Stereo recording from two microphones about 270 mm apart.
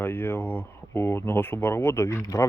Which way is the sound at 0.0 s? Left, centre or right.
Centre.